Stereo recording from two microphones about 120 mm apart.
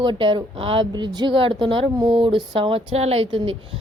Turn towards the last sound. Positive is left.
turn(degrees=-45)  # may be behind; listen again after turning